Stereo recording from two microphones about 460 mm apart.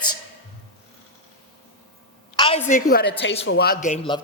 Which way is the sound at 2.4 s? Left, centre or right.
Centre.